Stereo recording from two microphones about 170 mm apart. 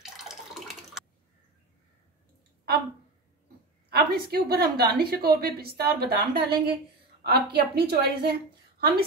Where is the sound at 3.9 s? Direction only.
65° right (ahead or behind).